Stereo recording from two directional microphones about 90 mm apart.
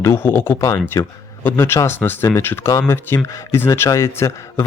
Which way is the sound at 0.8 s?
25° left (ahead or behind).